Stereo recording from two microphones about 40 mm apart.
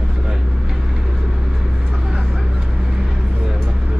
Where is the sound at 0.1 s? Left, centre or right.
Centre.